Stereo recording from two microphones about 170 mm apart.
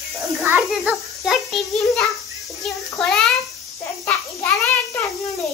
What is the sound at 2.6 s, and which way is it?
Child singing, centre (ahead or behind).